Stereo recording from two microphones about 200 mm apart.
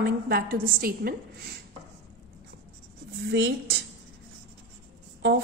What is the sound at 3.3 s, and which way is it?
Speech, 60° right (ahead or behind).